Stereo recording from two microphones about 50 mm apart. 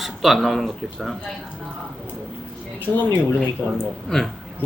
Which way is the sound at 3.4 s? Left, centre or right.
Centre.